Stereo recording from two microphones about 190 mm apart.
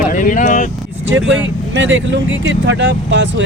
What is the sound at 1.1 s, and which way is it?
Speech, 85° right.